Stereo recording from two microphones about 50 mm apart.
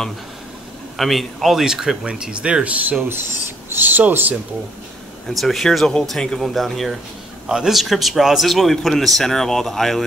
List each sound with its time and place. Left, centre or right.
0.9 s a man's voice: centre; by 3.1 s right
3.7 s speech: right
5.3 s a man's voice: centre
7.4 s a man's voice: centre